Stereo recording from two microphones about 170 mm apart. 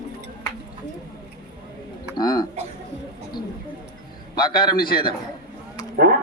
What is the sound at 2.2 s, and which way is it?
Speech, 25° left (ahead or behind).